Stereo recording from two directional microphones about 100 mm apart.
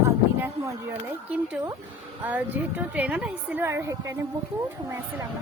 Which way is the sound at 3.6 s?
30° right (ahead or behind).